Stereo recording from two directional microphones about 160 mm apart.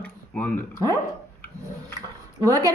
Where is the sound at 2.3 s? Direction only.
25° right (ahead or behind).